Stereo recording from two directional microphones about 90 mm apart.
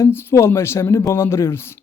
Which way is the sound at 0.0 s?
25° left (ahead or behind).